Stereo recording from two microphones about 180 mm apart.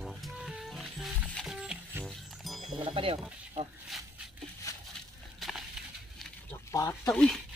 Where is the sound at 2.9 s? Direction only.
30° right (ahead or behind).